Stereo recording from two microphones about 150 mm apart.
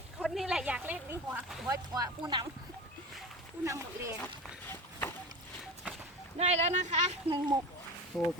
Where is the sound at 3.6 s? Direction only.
20° right (ahead or behind).